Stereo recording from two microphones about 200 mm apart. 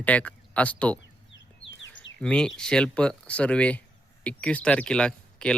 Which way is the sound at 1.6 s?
70° left (ahead or behind).